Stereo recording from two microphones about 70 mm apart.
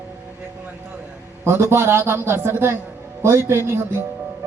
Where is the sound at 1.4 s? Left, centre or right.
Right.